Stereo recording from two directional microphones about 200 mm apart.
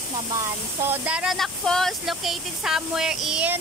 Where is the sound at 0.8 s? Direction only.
5° right (ahead or behind).